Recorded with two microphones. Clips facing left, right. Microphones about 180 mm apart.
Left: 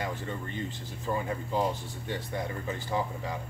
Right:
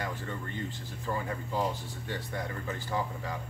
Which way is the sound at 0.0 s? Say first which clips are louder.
Left 2 dB; 20° left (ahead or behind).